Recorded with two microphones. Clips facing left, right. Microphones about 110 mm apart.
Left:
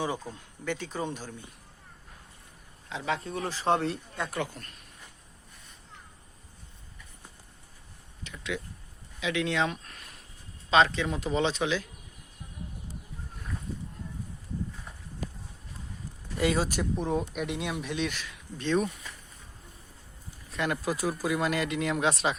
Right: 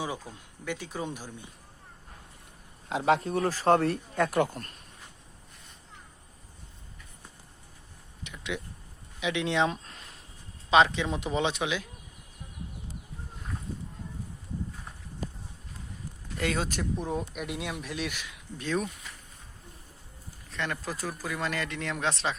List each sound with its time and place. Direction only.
0.0 s speech: 10° right (ahead or behind)
2.9 s speech: 50° right (ahead or behind)
4.2 s speech: 55° right (ahead or behind)
8.2 s speech: 20° right (ahead or behind)
16.4 s speech: 5° left (ahead or behind)
20.5 s speech: 10° left (ahead or behind)